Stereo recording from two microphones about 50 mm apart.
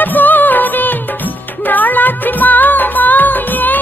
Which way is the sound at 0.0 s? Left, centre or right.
Left.